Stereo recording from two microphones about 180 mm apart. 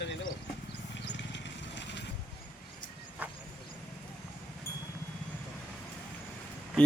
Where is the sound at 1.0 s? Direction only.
75° left (ahead or behind).